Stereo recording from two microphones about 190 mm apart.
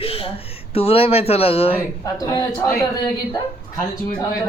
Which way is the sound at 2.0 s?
20° left (ahead or behind).